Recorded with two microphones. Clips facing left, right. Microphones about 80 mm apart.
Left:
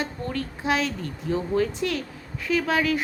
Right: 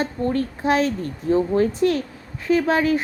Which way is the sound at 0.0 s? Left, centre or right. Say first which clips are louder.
Right 7 dB; right.